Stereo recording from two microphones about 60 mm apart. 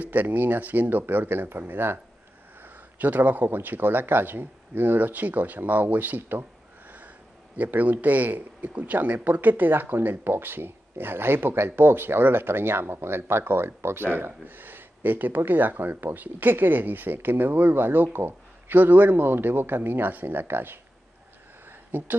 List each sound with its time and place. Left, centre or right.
0.0 s speech: right
7.5 s speech: right
21.9 s speech: right